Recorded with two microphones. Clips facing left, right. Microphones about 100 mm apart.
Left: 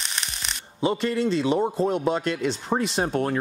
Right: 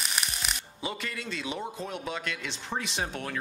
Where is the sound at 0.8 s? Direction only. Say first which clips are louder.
Left 13 dB; 30° left (ahead or behind).